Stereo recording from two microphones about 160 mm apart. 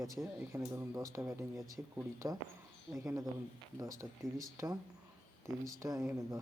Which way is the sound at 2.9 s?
Centre (ahead or behind).